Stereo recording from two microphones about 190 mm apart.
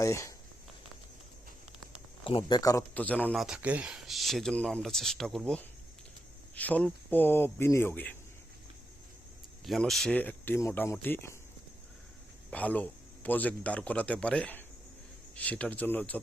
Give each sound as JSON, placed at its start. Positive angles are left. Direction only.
{"t": 0.0, "sound": "a man's voice", "side_deg": 15}
{"t": 2.2, "sound": "a man's voice", "side_deg": 25}
{"t": 3.4, "sound": "a man's voice", "side_deg": -5}
{"t": 9.6, "sound": "a man's voice", "side_deg": 0}
{"t": 12.5, "sound": "a man's voice", "side_deg": 5}